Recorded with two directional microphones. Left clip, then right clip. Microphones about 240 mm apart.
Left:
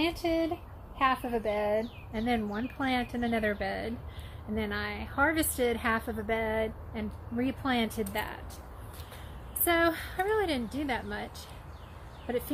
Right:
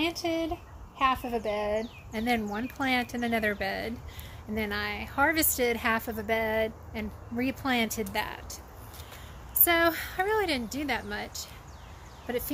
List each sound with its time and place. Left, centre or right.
0.0 s a woman's voice: centre
9.7 s a woman's voice: centre